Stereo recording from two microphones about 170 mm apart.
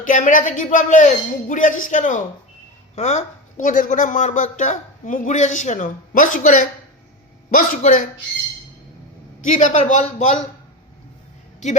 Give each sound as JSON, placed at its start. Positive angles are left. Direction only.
{"t": 0.0, "sound": "speech", "side_deg": 50}
{"t": 9.5, "sound": "speech", "side_deg": 45}
{"t": 11.6, "sound": "speech", "side_deg": 45}